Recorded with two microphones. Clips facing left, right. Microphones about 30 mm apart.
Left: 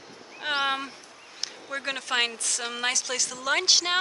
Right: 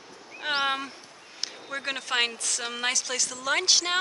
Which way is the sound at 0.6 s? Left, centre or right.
Centre.